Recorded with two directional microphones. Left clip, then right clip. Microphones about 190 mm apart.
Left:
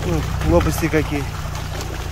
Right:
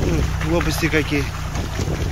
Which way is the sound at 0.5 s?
25° left (ahead or behind).